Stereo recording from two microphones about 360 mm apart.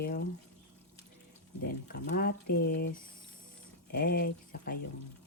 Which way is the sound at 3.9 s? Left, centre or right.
Left.